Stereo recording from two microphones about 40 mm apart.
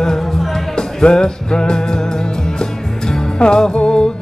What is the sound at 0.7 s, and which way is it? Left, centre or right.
Music, centre.